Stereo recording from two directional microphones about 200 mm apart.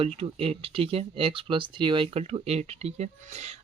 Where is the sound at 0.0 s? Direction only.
30° right (ahead or behind).